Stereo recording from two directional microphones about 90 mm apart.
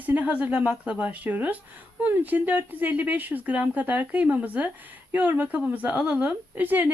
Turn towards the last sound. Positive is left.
turn(degrees=-20)  # may be behind; listen again after turning